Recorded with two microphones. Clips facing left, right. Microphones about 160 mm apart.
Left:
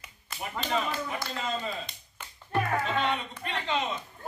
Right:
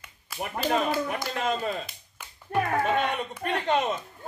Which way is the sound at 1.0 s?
65° right (ahead or behind).